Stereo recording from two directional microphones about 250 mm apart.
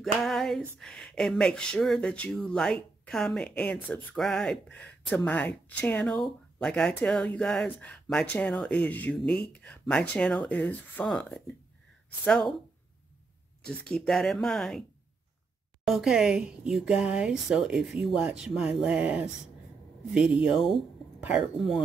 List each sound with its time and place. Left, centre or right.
0.0 s speech: centre
13.7 s speech: centre